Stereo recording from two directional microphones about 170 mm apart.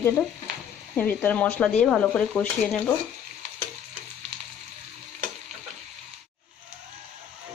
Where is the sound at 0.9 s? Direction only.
10° left (ahead or behind).